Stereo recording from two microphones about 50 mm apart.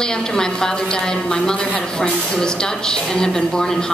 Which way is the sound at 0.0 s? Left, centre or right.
Centre.